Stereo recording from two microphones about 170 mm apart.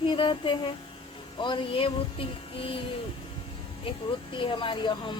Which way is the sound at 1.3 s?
30° left (ahead or behind).